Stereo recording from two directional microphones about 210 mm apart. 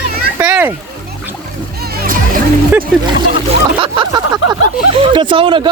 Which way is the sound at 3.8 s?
20° right (ahead or behind).